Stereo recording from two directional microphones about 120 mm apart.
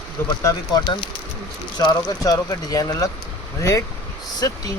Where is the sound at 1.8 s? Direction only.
35° left (ahead or behind).